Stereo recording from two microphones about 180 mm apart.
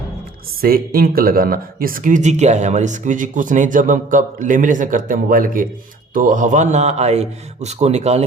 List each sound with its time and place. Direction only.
0.6 s a man's voice: 55° right (ahead or behind); by 8.2 s 35° right (ahead or behind)